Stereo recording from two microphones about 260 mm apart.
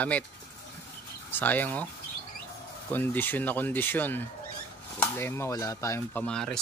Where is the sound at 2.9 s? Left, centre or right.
Centre.